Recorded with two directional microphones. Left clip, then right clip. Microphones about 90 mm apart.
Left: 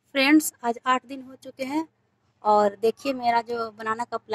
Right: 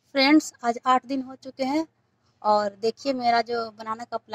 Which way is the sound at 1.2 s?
45° right (ahead or behind).